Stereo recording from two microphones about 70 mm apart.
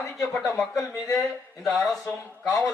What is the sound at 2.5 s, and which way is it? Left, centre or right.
Speech, left.